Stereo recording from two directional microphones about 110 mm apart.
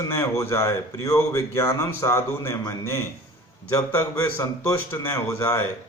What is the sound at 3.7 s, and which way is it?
Speech, 20° left (ahead or behind).